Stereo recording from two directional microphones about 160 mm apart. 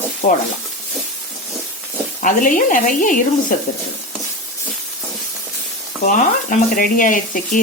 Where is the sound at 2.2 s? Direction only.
55° left (ahead or behind).